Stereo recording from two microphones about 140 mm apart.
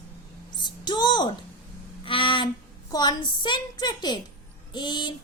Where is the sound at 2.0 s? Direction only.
40° left (ahead or behind).